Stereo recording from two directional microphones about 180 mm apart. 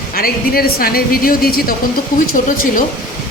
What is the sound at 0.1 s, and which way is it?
Speech, 55° left (ahead or behind).